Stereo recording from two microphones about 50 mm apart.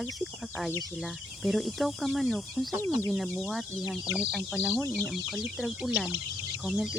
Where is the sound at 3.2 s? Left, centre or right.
Left.